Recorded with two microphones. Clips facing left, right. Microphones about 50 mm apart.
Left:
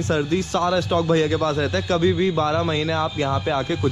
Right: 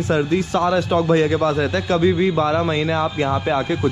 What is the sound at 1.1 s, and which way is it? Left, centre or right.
Speech, right.